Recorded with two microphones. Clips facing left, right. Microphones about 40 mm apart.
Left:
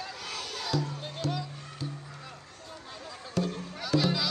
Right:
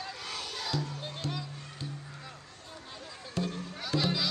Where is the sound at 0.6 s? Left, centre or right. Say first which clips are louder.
Left 4 dB; centre.